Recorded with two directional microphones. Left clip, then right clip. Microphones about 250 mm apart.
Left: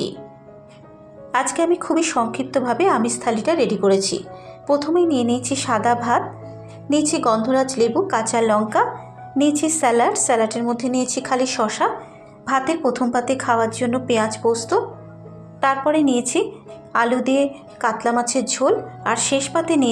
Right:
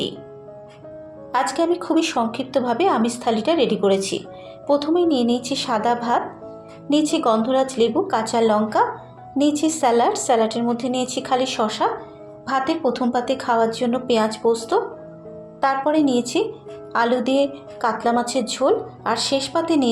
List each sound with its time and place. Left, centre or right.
1.3 s a woman's voice: centre
15.6 s a woman's voice: centre